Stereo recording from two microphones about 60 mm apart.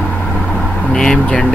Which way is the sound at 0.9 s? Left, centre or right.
Centre.